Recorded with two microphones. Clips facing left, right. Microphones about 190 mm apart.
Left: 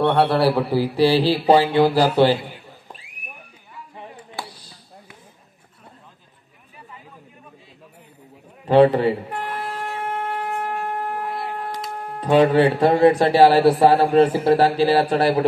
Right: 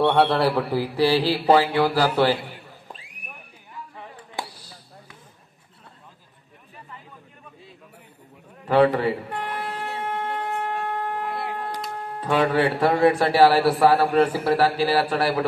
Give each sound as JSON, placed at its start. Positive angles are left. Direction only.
{"t": 0.1, "sound": "a man's voice", "side_deg": 0}
{"t": 0.9, "sound": "a man's voice", "side_deg": 20}
{"t": 8.6, "sound": "a man's voice", "side_deg": 25}
{"t": 10.6, "sound": "shofar", "side_deg": 35}
{"t": 12.2, "sound": "a man's voice", "side_deg": 20}